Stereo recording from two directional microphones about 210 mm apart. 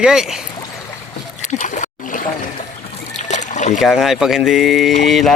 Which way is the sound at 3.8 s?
Centre (ahead or behind).